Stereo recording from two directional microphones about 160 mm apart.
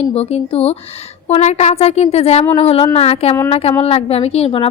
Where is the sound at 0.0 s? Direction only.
40° left (ahead or behind).